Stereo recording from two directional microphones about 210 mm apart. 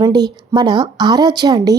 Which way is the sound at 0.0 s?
20° right (ahead or behind).